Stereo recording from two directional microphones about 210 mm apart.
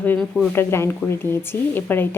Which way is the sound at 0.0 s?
10° left (ahead or behind).